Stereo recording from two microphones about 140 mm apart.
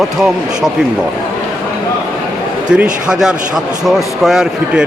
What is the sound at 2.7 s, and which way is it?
Speech, 5° right (ahead or behind).